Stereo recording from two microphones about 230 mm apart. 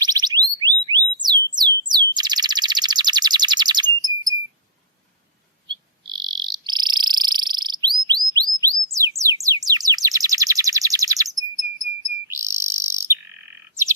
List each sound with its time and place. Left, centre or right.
0.0 s a sound: centre
5.6 s frog: centre
9.1 s bird: centre
12.3 s bird: centre